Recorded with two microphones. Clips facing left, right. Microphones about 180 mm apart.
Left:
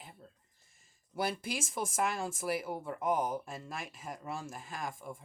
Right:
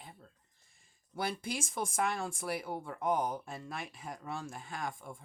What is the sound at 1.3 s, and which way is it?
Speech, 5° left (ahead or behind).